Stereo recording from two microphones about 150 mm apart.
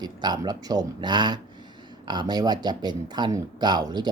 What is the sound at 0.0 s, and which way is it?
A man's voice, 30° right (ahead or behind).